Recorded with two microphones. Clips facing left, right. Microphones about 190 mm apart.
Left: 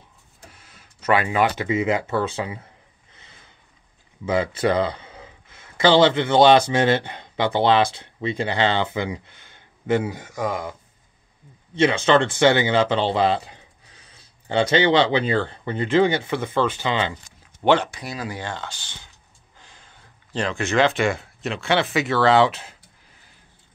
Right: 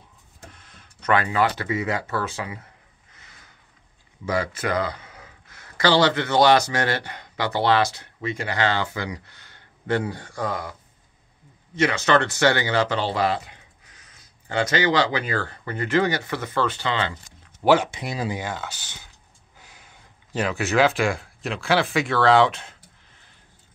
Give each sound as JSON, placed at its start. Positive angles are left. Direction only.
{"t": 0.5, "sound": "a sound", "side_deg": 5}
{"t": 1.2, "sound": "speech", "side_deg": 20}
{"t": 3.2, "sound": "sniff", "side_deg": 25}
{"t": 4.3, "sound": "a man's voice", "side_deg": 25}
{"t": 17.6, "sound": "speech", "side_deg": 0}
{"t": 17.9, "sound": "speech", "side_deg": -25}
{"t": 18.3, "sound": "speech", "side_deg": -10}